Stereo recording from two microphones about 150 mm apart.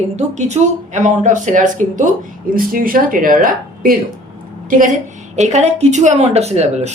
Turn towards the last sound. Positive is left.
turn(degrees=-45)  # may be behind; listen again after turning